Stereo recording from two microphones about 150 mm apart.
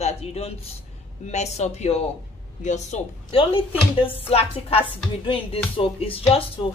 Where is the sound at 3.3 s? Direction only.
35° left (ahead or behind).